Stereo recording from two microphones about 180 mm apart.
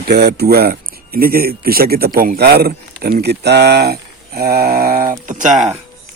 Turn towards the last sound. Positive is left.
turn(degrees=-5)  # may be behind; listen again after turning